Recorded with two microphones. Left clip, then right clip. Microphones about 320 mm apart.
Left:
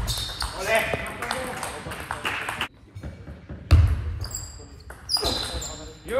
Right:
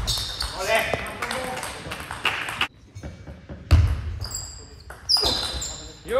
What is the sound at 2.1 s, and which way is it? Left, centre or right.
Run, centre.